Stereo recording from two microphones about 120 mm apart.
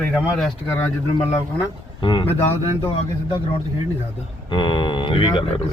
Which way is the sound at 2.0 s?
45° left (ahead or behind).